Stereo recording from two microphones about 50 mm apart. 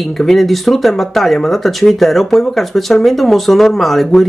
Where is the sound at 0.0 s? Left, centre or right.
Centre.